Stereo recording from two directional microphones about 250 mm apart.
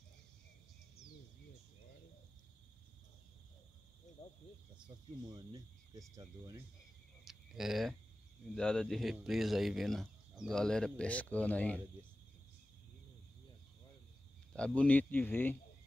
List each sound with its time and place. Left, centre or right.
4.2 s speech: left
5.2 s speech: centre
7.2 s a sound: centre
8.5 s speech: centre
14.5 s speech: centre